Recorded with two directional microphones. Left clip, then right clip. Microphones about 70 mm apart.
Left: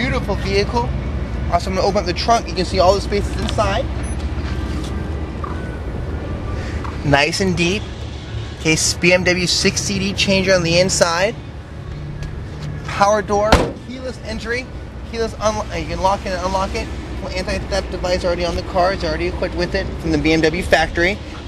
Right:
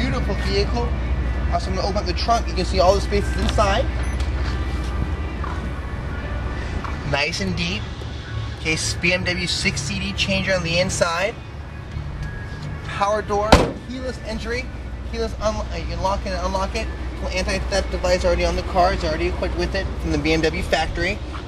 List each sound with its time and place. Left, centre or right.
0.0 s speech: left
2.5 s speech: centre
7.1 s speech: left
12.9 s speech: left
14.3 s speech: centre
15.1 s speech: left
17.5 s speech: centre; by 21.2 s left